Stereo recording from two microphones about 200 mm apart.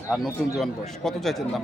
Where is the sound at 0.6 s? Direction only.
Centre (ahead or behind).